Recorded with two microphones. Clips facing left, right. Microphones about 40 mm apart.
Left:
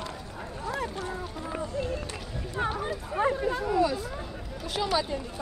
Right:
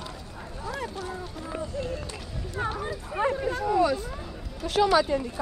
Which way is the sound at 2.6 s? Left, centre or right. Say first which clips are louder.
Even; centre.